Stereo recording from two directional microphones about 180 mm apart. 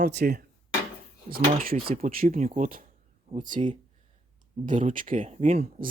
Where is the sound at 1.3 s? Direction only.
45° right (ahead or behind).